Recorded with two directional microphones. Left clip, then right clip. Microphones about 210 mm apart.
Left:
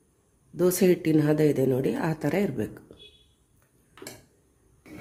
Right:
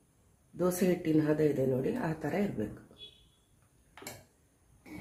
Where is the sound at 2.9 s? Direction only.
40° left (ahead or behind).